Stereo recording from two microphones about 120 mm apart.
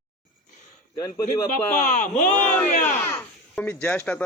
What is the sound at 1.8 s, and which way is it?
Speech, 90° left.